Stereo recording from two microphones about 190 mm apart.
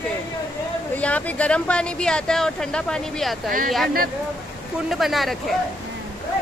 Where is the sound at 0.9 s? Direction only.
5° left (ahead or behind).